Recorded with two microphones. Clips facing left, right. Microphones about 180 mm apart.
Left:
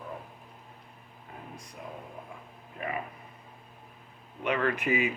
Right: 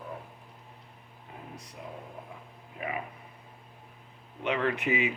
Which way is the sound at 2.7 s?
10° right (ahead or behind).